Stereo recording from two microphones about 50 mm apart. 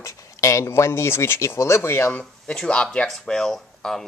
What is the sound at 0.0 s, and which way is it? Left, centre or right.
Speech, left.